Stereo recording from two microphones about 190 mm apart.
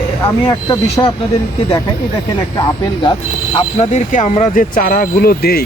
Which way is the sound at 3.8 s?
40° left (ahead or behind).